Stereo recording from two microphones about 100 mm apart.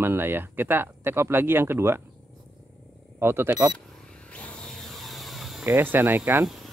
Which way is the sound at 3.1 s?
25° right (ahead or behind).